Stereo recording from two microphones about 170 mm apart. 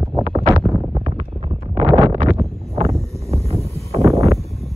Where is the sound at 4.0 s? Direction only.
20° right (ahead or behind).